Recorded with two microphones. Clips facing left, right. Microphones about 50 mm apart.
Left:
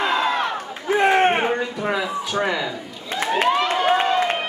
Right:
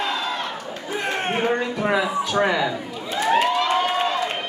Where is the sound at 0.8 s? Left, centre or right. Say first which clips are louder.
Left 9 dB; left.